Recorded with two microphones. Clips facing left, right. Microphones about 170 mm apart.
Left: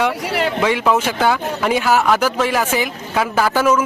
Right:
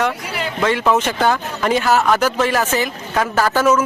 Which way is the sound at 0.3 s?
70° left (ahead or behind).